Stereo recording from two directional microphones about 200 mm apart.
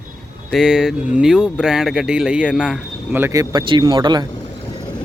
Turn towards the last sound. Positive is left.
turn(degrees=-20)  # may be behind; listen again after turning